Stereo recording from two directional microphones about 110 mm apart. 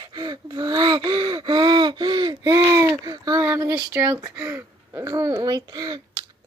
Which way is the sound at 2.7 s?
25° right (ahead or behind).